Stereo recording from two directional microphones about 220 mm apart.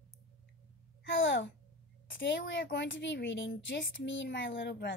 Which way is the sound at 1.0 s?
55° left (ahead or behind).